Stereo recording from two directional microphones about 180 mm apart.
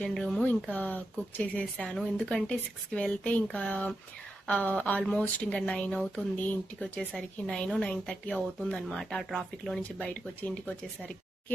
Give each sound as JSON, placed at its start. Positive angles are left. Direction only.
{"t": 0.0, "sound": "a woman's voice", "side_deg": 5}